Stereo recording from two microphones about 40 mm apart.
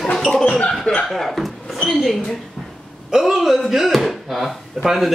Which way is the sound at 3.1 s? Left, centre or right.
Centre.